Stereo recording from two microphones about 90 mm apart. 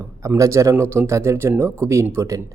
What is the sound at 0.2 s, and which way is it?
Speech, 35° right (ahead or behind).